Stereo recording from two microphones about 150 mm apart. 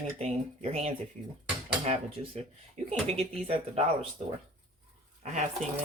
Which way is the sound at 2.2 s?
40° right (ahead or behind).